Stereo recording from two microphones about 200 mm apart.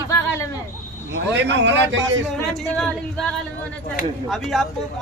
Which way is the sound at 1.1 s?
60° right (ahead or behind).